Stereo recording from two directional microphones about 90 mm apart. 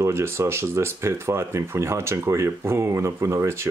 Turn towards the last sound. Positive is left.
turn(degrees=-30)  # may be behind; listen again after turning